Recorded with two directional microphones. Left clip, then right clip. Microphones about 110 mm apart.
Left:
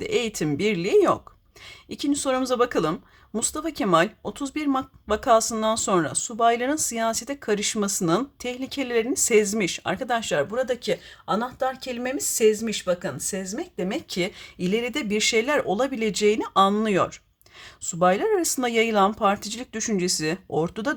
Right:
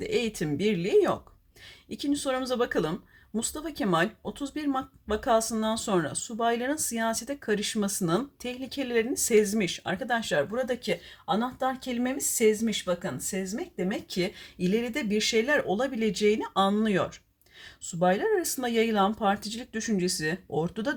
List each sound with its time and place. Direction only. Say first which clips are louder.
0.0 s speech: left 4 dB; 30° left (ahead or behind)
11.3 s speech: left 4 dB; 65° left (ahead or behind); by 20.9 s 40° left (ahead or behind)